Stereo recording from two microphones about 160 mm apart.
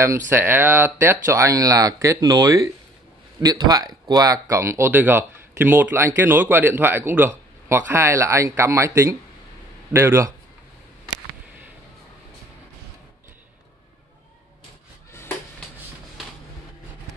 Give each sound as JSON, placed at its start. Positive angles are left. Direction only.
{"t": 0.3, "sound": "speech", "side_deg": -15}